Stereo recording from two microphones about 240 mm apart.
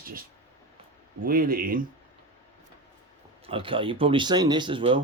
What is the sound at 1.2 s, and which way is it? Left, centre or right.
Speech, right.